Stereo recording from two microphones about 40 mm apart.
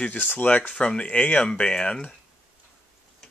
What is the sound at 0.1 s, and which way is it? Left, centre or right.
Speech, left.